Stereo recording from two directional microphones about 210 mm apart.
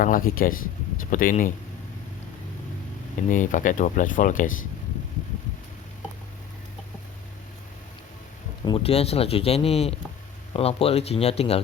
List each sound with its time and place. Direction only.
0.0 s speech: 40° left (ahead or behind)
3.2 s speech: 35° left (ahead or behind)
8.6 s speech: 25° left (ahead or behind)